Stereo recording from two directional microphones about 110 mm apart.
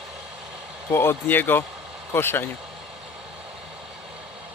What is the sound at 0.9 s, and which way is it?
Speech, 20° left (ahead or behind).